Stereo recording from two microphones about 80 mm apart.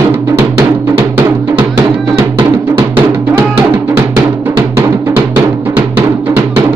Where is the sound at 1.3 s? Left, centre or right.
Right.